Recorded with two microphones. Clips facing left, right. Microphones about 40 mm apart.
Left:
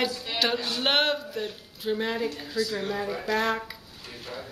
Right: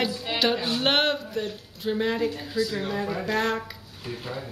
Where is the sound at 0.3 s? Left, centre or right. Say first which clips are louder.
Right 2 dB; right.